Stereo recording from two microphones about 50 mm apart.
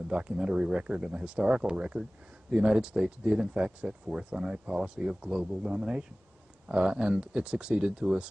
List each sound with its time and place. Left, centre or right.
0.1 s speech: centre